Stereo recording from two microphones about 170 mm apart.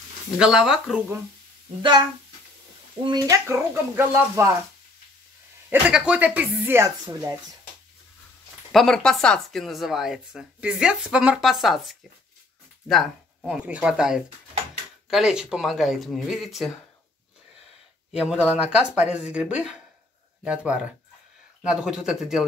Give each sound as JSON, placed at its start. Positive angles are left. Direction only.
{"t": 0.4, "sound": "speech", "side_deg": -5}
{"t": 1.8, "sound": "speech", "side_deg": -25}
{"t": 5.7, "sound": "speech", "side_deg": -5}
{"t": 8.7, "sound": "speech", "side_deg": 5}
{"t": 18.5, "sound": "speech", "side_deg": -10}